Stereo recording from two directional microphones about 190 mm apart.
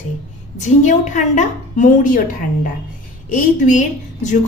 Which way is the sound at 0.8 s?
40° left (ahead or behind).